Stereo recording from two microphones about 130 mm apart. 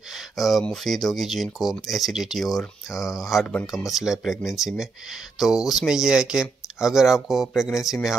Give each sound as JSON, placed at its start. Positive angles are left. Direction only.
{"t": 0.1, "sound": "speech", "side_deg": 0}